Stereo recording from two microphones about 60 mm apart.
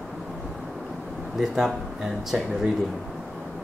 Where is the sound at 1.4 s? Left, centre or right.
Centre.